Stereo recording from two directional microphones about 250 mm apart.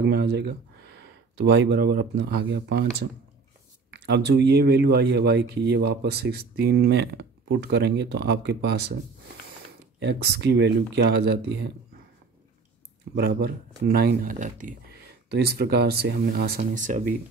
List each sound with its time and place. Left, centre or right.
0.0 s speech: right
9.9 s speech: right
13.1 s speech: right